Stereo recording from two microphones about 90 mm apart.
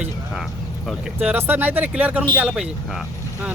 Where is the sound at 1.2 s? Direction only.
20° right (ahead or behind).